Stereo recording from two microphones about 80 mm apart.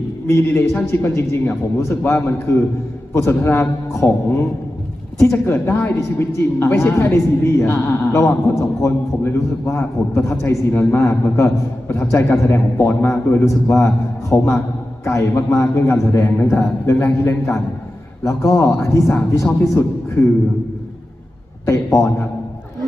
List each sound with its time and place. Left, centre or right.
0.3 s a man's voice: left
13.4 s a man's voice: left
21.7 s a man's voice: left